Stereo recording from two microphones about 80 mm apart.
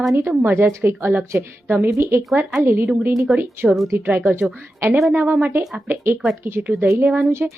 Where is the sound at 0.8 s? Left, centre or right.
Right.